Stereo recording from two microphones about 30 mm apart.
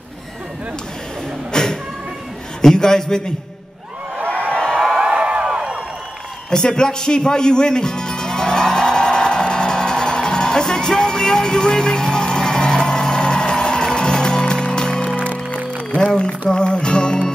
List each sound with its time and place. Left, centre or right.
1.5 s music: left
2.7 s a man's voice: left
4.3 s a sound: left
5.0 s a sound: right
6.5 s music: left
16.2 s music: left